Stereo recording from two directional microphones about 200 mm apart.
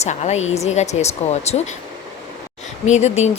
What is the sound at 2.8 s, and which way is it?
Speech, 35° left (ahead or behind).